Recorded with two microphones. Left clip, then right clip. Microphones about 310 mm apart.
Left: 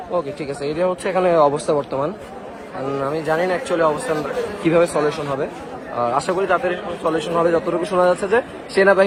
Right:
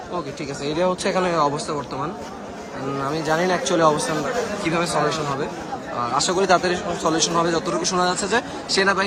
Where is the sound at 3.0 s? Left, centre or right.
Centre.